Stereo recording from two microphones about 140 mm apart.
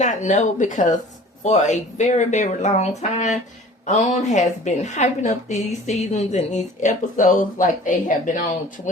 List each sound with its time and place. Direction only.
0.0 s speech: 60° left (ahead or behind)